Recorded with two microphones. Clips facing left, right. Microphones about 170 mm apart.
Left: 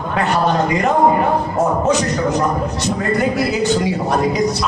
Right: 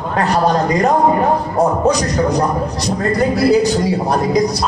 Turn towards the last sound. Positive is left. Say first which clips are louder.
# right 2 dB
turn(degrees=-35)  # may be behind; listen again after turning